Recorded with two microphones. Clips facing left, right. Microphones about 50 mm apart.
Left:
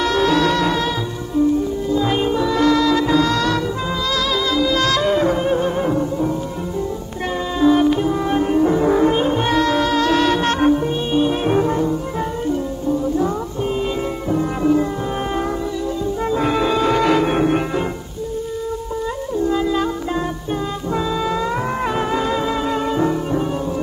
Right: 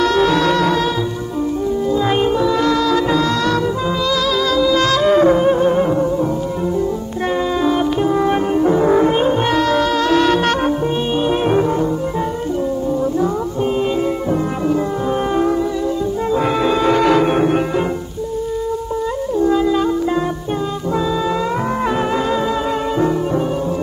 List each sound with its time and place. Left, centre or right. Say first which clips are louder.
0.0 s music: right 2 dB; right
2.7 s music: even; right
4.7 s music: right 4 dB; right
5.4 s music: right 5 dB; centre
8.3 s music: right 1 dB; right
8.8 s music: right 2 dB; centre
9.1 s music: right 2 dB; right
16.3 s music: right 2 dB; right
21.9 s music: right 2 dB; right